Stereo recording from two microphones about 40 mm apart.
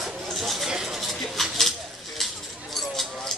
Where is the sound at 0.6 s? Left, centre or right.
Centre.